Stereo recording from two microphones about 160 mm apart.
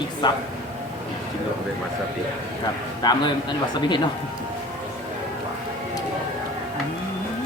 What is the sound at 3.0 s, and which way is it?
A man's voice, 25° left (ahead or behind).